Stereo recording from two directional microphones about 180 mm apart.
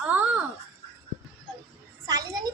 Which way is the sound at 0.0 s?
10° right (ahead or behind).